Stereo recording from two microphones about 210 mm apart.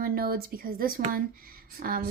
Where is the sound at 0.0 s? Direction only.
45° right (ahead or behind).